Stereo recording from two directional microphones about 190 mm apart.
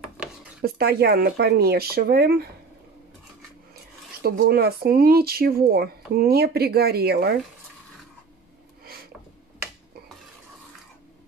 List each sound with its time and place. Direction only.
0.2 s dishes: 5° right (ahead or behind)
0.6 s speech: 55° right (ahead or behind)
4.2 s speech: 55° right (ahead or behind)